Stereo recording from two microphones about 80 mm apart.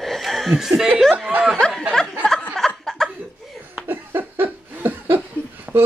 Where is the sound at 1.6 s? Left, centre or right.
Centre.